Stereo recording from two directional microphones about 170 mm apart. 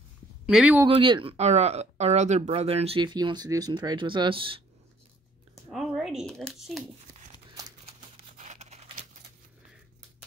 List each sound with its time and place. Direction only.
0.5 s speech: 5° right (ahead or behind)
0.8 s speech: 30° right (ahead or behind)
5.7 s speech: centre (ahead or behind)
8.4 s a sound: 45° right (ahead or behind)